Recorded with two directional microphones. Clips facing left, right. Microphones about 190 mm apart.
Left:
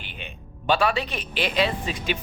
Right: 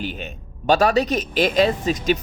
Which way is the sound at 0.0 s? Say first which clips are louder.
Right 11 dB; 40° right (ahead or behind).